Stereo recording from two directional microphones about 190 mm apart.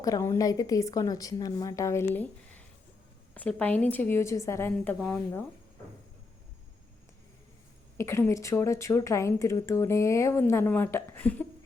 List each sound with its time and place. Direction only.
0.0 s speech: 15° left (ahead or behind)
7.9 s speech: 15° left (ahead or behind)